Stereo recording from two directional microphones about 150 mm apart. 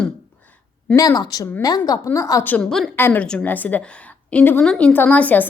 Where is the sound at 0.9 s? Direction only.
25° left (ahead or behind).